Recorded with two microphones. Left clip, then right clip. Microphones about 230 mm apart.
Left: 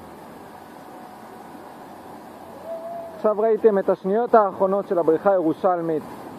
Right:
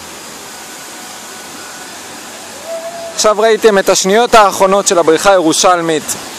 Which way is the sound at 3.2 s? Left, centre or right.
Right.